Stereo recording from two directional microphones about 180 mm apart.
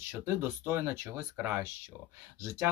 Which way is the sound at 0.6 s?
10° right (ahead or behind).